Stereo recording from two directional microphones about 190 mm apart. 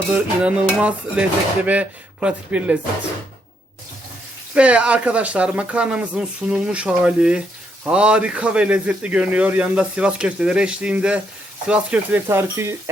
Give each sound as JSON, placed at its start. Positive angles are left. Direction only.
{"t": 0.4, "sound": "speech", "side_deg": -5}
{"t": 4.5, "sound": "speech", "side_deg": -5}